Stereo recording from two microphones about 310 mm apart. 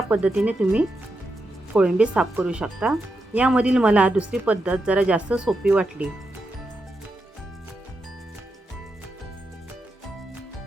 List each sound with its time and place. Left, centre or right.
0.1 s a woman's voice: centre